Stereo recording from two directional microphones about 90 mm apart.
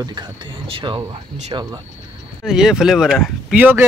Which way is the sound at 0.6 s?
80° right.